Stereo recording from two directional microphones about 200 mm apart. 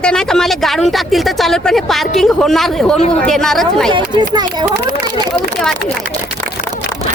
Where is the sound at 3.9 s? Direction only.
20° right (ahead or behind).